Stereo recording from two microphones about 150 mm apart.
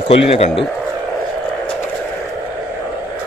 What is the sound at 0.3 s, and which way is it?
Speech, 45° left (ahead or behind).